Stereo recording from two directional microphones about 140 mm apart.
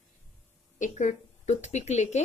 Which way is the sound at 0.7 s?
65° left (ahead or behind).